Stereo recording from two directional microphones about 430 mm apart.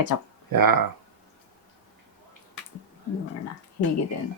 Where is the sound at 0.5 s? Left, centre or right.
Right.